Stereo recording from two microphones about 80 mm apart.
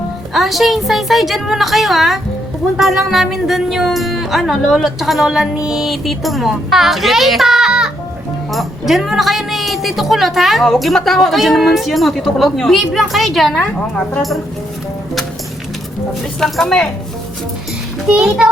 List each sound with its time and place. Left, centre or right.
0.3 s speech: centre
8.9 s speech: centre
16.4 s speech: centre
18.1 s a child's voice: centre